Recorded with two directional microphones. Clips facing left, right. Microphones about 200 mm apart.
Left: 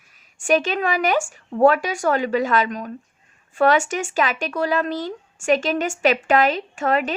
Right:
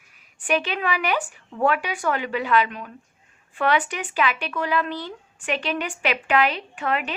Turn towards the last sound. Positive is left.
turn(degrees=40)  # may be behind; listen again after turning